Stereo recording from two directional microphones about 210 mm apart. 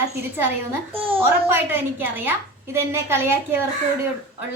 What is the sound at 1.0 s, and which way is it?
Speech, 25° right (ahead or behind).